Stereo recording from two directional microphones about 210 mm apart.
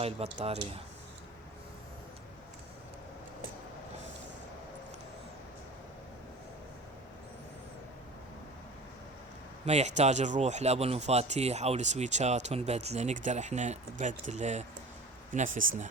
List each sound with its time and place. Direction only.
0.0 s speech: 30° right (ahead or behind)
9.6 s speech: 30° right (ahead or behind)